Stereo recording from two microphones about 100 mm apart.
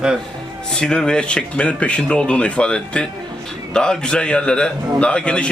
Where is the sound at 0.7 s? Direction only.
5° left (ahead or behind).